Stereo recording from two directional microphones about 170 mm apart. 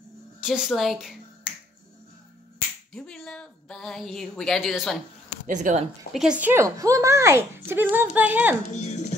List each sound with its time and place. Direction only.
0.4 s a woman's voice: 5° right (ahead or behind)
2.9 s a woman's voice: 5° left (ahead or behind)
5.5 s speech: 45° right (ahead or behind)
6.1 s a woman's voice: 5° right (ahead or behind)
8.7 s speech: 40° left (ahead or behind)